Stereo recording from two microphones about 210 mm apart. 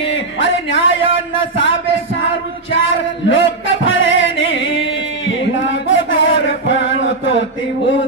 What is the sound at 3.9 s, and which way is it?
Music, 65° left (ahead or behind).